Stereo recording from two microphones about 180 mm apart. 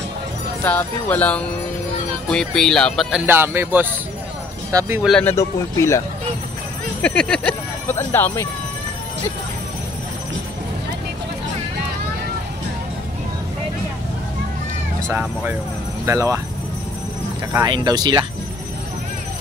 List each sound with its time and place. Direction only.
0.7 s speech: 10° left (ahead or behind); by 5.0 s 15° right (ahead or behind)
5.0 s speech: 5° left (ahead or behind)
5.3 s speech: 15° left (ahead or behind)
15.0 s speech: 10° right (ahead or behind)
17.5 s speech: 15° right (ahead or behind)